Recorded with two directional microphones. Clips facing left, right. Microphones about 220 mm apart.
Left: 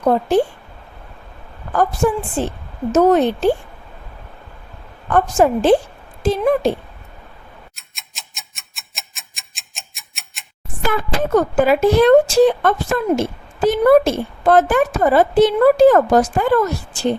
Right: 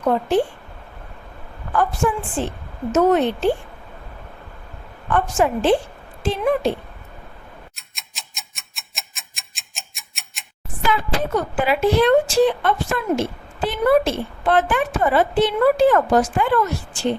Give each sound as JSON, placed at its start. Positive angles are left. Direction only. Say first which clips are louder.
{"t": 0.0, "sound": "a woman's voice", "louder": "left 3 dB", "side_deg": 40}
{"t": 1.7, "sound": "a woman's voice", "louder": "left 3 dB", "side_deg": 40}
{"t": 5.0, "sound": "a woman's voice", "louder": "left 4 dB", "side_deg": 40}
{"t": 7.8, "sound": "tick-tock", "louder": "even", "side_deg": 0}
{"t": 11.2, "sound": "a woman's voice", "louder": "left 7 dB", "side_deg": 45}